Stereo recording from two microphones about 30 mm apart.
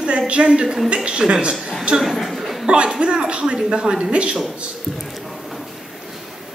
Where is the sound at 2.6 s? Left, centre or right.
Right.